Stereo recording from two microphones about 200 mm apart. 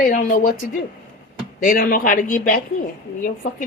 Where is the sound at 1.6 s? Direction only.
45° left (ahead or behind).